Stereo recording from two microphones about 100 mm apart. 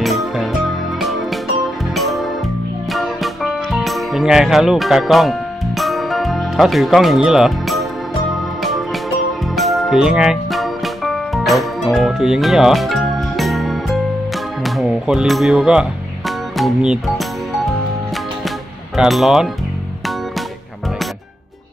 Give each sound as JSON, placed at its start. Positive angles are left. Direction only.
{"t": 0.0, "sound": "music", "side_deg": 0}
{"t": 18.9, "sound": "speech", "side_deg": 0}